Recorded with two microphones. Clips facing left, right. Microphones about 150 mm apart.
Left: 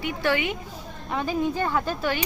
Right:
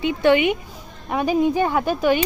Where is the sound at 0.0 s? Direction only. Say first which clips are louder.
Right 8 dB; 20° right (ahead or behind).